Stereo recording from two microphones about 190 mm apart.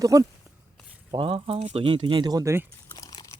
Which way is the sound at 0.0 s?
15° right (ahead or behind).